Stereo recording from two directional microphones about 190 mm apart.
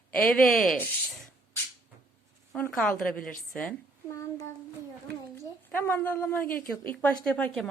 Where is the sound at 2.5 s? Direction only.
5° left (ahead or behind).